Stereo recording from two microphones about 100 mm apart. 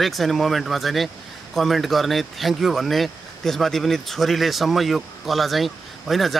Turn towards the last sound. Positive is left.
turn(degrees=0)  # may be behind; listen again after turning